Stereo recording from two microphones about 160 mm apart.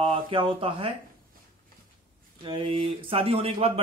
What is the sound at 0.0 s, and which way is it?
Speech, 30° right (ahead or behind).